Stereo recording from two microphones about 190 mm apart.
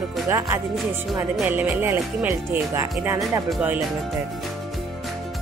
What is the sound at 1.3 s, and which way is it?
Speech, 5° right (ahead or behind).